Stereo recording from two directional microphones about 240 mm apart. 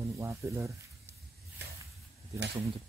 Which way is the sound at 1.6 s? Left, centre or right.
Right.